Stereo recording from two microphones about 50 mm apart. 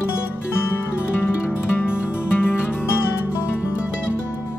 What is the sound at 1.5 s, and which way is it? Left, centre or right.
Music, left.